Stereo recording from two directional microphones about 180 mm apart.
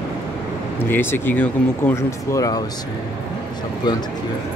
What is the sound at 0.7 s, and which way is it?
Speech, 10° left (ahead or behind).